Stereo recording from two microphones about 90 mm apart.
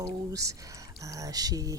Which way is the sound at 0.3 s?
40° right (ahead or behind).